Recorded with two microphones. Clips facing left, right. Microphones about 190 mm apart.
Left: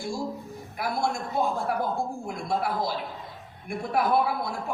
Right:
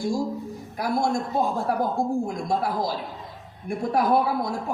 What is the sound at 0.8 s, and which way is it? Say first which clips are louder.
A man's voice: right 4 dB; 40° right (ahead or behind).